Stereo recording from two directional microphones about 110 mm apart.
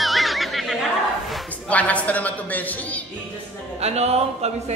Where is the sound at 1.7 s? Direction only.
10° left (ahead or behind).